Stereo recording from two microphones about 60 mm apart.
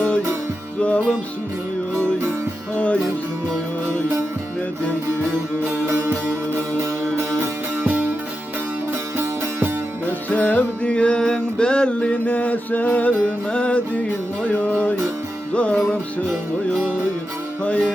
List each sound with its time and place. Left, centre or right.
0.8 s music: left
2.7 s music: left
5.6 s music: right
6.5 s music: right
7.8 s music: right
9.1 s music: right
10.2 s music: left
10.8 s music: centre
17.6 s music: centre